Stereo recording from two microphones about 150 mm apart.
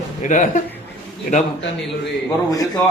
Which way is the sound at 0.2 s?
55° left (ahead or behind).